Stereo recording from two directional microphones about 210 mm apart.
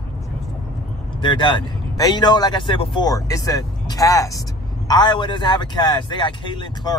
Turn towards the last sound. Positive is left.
turn(degrees=20)  # may be behind; listen again after turning